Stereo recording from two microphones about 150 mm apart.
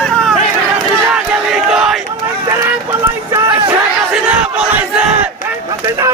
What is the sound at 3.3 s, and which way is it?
Music, 30° right (ahead or behind).